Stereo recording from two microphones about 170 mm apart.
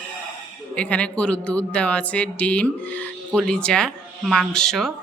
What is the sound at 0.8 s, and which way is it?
Speech, 5° left (ahead or behind).